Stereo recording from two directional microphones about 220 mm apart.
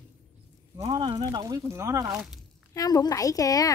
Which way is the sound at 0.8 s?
20° right (ahead or behind).